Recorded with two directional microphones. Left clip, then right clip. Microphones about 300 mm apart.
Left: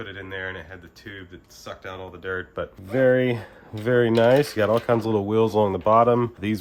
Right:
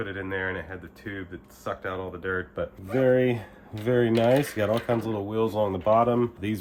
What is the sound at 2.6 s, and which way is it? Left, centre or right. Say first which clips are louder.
Speech: left 7 dB; left.